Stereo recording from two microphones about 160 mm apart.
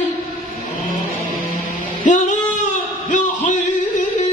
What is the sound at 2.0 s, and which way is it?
Music, 50° left (ahead or behind).